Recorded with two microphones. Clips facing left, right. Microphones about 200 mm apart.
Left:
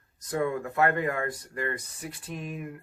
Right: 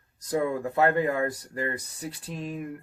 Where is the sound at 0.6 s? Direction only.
30° right (ahead or behind).